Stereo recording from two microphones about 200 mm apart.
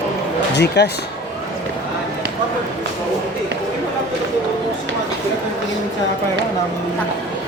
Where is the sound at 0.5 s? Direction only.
60° left (ahead or behind).